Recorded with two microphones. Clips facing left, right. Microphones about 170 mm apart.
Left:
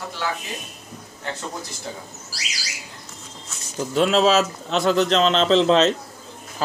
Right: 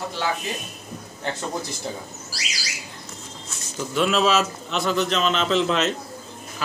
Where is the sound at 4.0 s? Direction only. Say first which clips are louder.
Left 3 dB; 30° left (ahead or behind).